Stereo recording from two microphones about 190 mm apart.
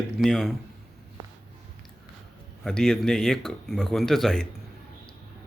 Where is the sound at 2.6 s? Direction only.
5° left (ahead or behind).